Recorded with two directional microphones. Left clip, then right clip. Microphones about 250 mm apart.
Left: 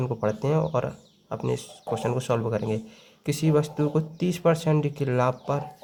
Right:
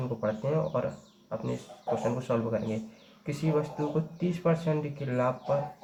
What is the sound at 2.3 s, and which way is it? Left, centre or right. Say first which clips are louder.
Speech: left 5 dB; left.